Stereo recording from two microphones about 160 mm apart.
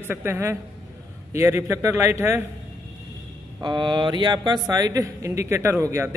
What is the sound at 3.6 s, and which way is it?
A man's voice, 30° right (ahead or behind).